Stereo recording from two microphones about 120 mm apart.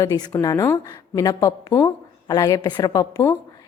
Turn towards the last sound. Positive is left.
turn(degrees=25)  # may be behind; listen again after turning